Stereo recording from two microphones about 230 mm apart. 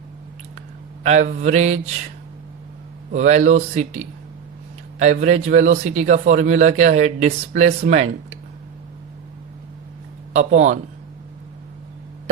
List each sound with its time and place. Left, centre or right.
1.0 s a man's voice: right
3.1 s a man's voice: right
10.3 s a man's voice: right